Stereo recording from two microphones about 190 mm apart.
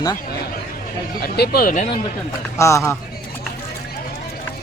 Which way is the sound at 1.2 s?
55° left (ahead or behind).